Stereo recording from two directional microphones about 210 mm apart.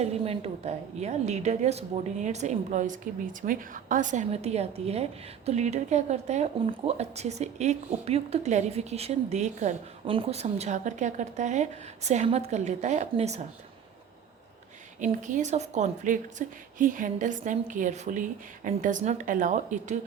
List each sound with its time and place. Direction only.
0.0 s speech: 30° right (ahead or behind)
15.0 s speech: 35° right (ahead or behind)